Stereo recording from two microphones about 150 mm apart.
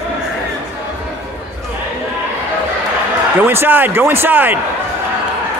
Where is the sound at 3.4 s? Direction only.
15° right (ahead or behind).